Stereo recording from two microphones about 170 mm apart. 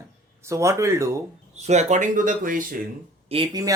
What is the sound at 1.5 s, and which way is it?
Speech, 40° right (ahead or behind).